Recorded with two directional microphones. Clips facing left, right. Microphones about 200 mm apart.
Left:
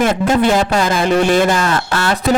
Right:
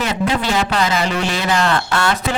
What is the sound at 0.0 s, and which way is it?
Speech, 50° left (ahead or behind).